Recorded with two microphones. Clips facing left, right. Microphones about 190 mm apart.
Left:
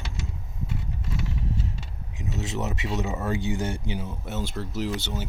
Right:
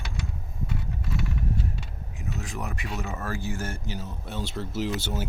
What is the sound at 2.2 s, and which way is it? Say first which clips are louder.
Speech: left 4 dB; 20° left (ahead or behind).